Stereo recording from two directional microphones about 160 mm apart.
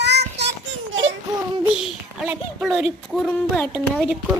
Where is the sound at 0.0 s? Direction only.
90° right.